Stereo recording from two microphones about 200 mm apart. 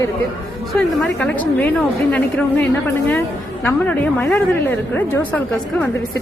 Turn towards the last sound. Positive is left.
turn(degrees=10)  # may be behind; listen again after turning